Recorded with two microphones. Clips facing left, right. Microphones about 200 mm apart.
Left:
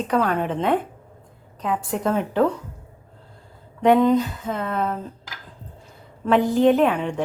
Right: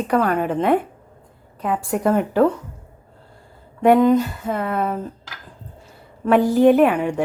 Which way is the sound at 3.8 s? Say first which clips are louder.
Right 2 dB; 5° right (ahead or behind).